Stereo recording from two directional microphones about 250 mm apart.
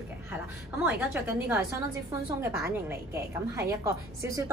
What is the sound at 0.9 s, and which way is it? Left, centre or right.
A woman's voice, centre.